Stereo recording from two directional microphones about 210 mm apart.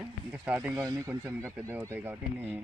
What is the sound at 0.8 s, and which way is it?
Speech, 15° right (ahead or behind).